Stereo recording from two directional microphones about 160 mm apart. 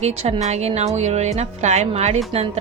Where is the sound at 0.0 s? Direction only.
45° right (ahead or behind).